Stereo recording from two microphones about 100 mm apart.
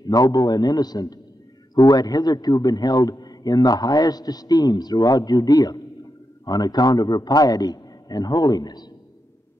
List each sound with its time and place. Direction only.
0.0 s a man's voice: 40° left (ahead or behind)